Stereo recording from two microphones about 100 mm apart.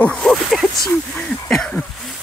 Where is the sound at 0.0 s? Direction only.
5° left (ahead or behind).